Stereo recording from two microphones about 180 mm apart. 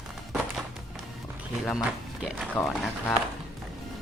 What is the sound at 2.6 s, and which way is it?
Speech, 5° left (ahead or behind).